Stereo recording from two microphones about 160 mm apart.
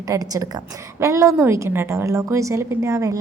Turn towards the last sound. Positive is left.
turn(degrees=-20)  # may be behind; listen again after turning